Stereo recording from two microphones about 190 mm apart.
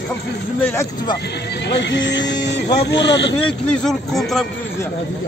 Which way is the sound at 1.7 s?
70° left (ahead or behind).